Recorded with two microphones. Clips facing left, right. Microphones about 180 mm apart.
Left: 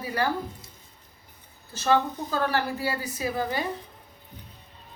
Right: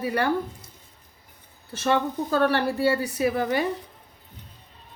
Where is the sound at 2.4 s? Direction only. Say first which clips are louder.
Right 5 dB; 65° right (ahead or behind).